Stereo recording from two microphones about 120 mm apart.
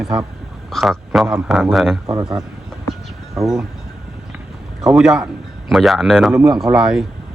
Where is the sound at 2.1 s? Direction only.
30° right (ahead or behind).